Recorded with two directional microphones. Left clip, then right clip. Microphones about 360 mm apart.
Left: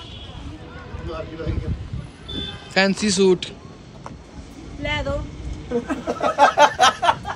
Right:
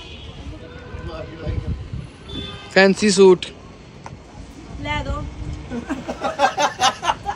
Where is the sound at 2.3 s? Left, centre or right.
Centre.